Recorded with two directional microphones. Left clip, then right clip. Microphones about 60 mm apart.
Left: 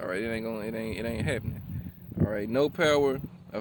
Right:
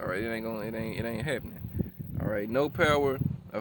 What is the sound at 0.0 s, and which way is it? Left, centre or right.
Speech, right.